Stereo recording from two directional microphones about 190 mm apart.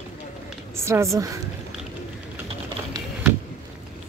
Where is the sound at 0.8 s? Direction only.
15° right (ahead or behind).